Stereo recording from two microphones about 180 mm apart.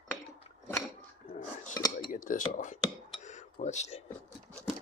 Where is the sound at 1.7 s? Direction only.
20° left (ahead or behind).